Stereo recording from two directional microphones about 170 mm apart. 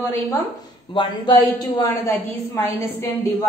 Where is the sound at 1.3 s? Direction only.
15° left (ahead or behind).